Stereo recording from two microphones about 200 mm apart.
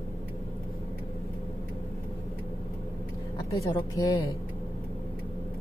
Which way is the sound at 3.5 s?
15° left (ahead or behind).